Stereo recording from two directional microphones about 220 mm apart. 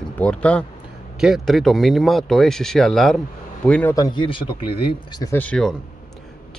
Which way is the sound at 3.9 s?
20° left (ahead or behind).